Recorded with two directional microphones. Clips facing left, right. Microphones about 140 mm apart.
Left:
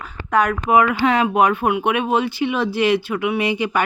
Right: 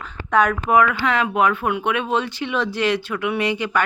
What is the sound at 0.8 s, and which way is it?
Speech, 20° left (ahead or behind).